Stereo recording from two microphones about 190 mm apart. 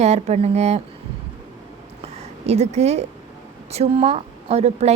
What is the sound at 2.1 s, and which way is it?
A woman's voice, 35° right (ahead or behind).